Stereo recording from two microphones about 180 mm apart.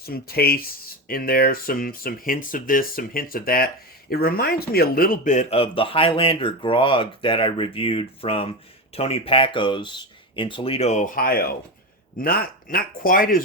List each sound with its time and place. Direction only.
0.0 s speech: 60° left (ahead or behind)